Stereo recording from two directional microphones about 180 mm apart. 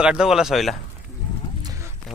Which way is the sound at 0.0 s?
5° right (ahead or behind).